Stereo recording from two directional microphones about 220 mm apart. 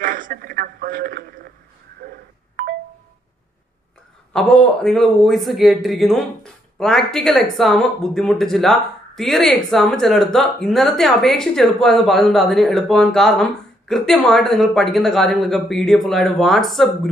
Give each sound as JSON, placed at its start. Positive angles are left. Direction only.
{"t": 0.0, "sound": "radio", "side_deg": -35}
{"t": 4.3, "sound": "a woman's voice", "side_deg": 5}